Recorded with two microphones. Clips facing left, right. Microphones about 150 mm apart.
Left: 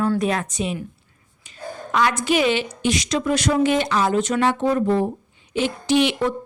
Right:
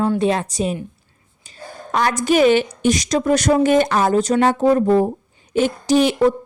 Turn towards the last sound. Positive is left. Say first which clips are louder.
# right 4 dB
turn(degrees=-40)  # may be behind; listen again after turning